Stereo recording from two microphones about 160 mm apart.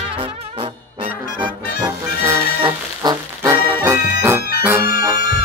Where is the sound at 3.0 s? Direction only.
25° right (ahead or behind).